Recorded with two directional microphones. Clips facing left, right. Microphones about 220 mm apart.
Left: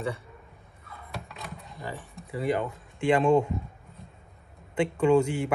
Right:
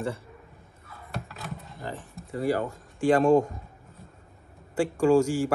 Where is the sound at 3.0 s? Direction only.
40° right (ahead or behind).